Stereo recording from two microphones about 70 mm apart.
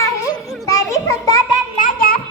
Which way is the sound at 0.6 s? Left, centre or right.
Left.